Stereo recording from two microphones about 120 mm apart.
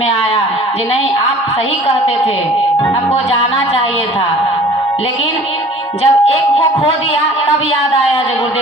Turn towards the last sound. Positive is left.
turn(degrees=55)  # may be behind; listen again after turning